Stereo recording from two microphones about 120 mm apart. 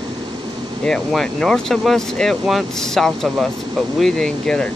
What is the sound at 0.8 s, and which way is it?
Speech, 5° left (ahead or behind).